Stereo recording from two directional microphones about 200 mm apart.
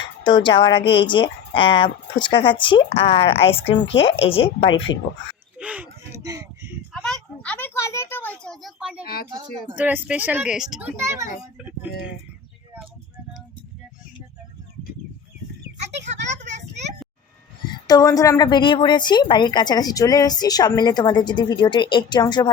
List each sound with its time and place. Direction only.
0.3 s a woman's voice: 25° left (ahead or behind)
3.8 s speech: 65° left (ahead or behind)
4.2 s a woman's voice: 30° left (ahead or behind)
5.5 s a sound: 5° right (ahead or behind)
6.2 s speech: 15° right (ahead or behind)
6.9 s speech: centre (ahead or behind); by 11.3 s 15° right (ahead or behind)
16.0 s a sound: 35° right (ahead or behind)
17.8 s a woman's voice: 20° left (ahead or behind)